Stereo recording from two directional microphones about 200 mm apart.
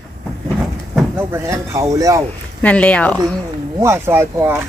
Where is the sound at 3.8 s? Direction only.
15° right (ahead or behind).